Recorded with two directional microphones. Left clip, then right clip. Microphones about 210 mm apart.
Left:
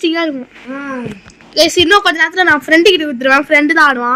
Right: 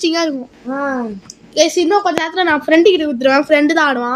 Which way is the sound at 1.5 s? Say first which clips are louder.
Left 4 dB; 5° right (ahead or behind).